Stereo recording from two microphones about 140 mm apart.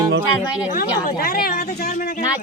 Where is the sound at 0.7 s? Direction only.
90° left.